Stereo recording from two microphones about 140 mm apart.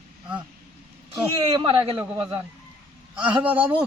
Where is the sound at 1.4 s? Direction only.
35° right (ahead or behind).